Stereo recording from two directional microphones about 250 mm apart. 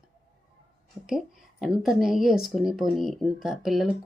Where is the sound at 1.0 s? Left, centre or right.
Centre.